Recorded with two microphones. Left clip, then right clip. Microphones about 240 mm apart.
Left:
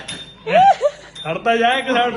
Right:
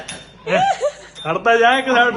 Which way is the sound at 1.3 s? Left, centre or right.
Right.